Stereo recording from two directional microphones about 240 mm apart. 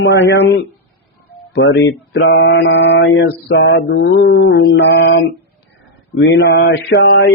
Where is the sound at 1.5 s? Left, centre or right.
Left.